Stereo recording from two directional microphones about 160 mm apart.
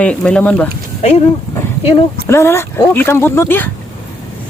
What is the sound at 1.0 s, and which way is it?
Speech, 40° left (ahead or behind).